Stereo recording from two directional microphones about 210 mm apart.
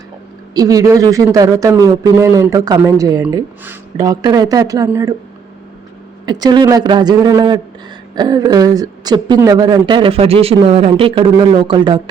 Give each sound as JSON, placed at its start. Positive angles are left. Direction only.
{"t": 0.5, "sound": "a man's voice", "side_deg": -15}
{"t": 6.2, "sound": "speech", "side_deg": -20}